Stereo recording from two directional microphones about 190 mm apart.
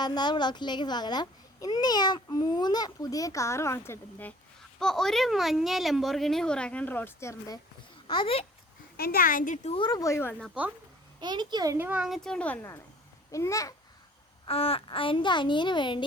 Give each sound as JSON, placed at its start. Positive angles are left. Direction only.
{"t": 0.0, "sound": "a child's voice", "side_deg": 20}
{"t": 9.0, "sound": "speech", "side_deg": 50}
{"t": 9.7, "sound": "speech", "side_deg": 20}
{"t": 11.2, "sound": "a child's voice", "side_deg": -25}
{"t": 14.4, "sound": "a child's voice", "side_deg": 30}